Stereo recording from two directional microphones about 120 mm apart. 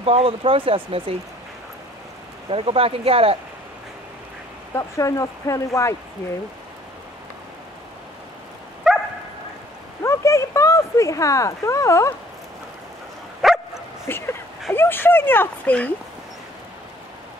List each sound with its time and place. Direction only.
0.0 s speech: 55° right (ahead or behind)
2.5 s speech: 50° right (ahead or behind)
4.7 s speech: 25° left (ahead or behind)
8.8 s bow-wow: centre (ahead or behind)
10.0 s a sound: 25° left (ahead or behind)
13.4 s bow-wow: centre (ahead or behind)
14.0 s speech: 20° left (ahead or behind)